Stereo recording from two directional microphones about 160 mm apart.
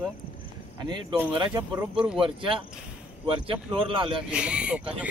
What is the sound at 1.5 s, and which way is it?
Speech, 10° right (ahead or behind).